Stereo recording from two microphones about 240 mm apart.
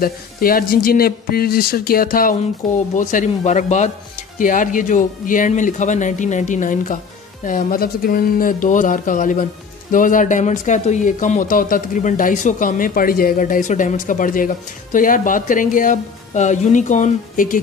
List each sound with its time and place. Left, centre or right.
0.0 s speech: left
2.6 s speech: centre
3.0 s speech: left